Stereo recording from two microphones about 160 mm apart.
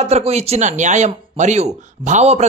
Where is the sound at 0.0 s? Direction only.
45° right (ahead or behind).